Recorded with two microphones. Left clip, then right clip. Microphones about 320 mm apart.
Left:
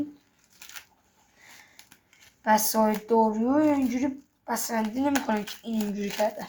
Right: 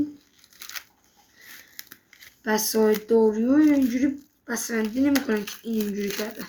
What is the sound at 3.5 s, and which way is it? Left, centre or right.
Speech, left.